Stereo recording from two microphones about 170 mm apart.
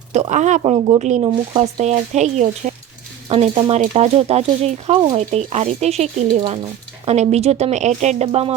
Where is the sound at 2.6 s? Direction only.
50° right (ahead or behind).